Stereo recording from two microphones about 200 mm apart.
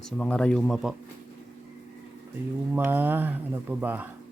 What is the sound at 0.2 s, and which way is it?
Speech, 5° left (ahead or behind).